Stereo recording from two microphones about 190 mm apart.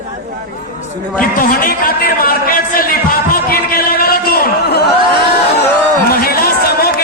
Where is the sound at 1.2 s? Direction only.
45° left (ahead or behind).